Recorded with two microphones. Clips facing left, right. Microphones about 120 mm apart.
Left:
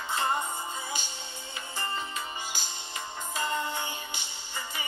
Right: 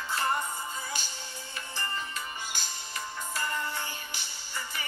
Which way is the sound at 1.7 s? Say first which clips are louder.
Left 2 dB; 20° left (ahead or behind).